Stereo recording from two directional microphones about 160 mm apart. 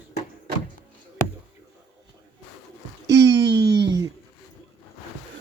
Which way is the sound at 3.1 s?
20° right (ahead or behind).